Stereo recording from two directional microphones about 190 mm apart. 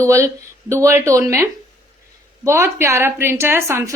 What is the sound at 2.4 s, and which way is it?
A woman's voice, 15° right (ahead or behind).